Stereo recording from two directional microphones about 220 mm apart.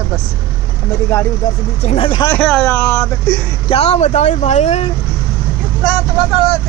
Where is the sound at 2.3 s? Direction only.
5° left (ahead or behind).